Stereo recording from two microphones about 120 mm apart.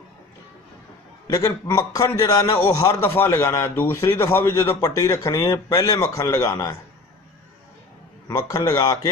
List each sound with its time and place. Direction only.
1.2 s speech: 30° left (ahead or behind)
8.3 s a man's voice: 30° left (ahead or behind)